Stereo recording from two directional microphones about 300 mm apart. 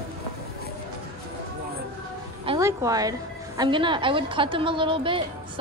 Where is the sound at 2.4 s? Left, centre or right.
Centre.